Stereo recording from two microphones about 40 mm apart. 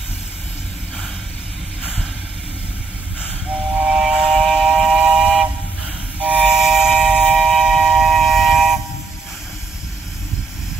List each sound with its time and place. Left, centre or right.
3.7 s train: centre
6.1 s train: right
6.5 s train: centre
7.3 s train: centre
7.8 s a sound: centre